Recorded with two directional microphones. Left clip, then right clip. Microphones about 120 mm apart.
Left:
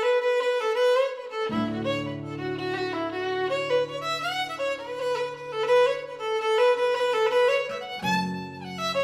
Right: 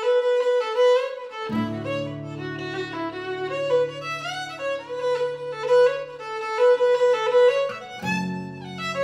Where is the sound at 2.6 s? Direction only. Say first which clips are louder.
Left 1 dB; 35° left (ahead or behind).